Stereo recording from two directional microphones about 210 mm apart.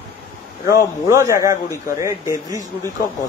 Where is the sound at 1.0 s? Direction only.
15° right (ahead or behind).